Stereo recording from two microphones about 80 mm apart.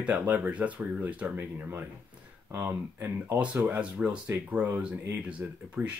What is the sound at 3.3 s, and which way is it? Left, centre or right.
Speech, centre.